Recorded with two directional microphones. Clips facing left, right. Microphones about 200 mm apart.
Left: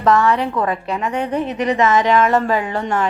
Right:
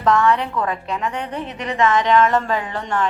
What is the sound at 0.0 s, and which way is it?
A woman's voice, 5° left (ahead or behind).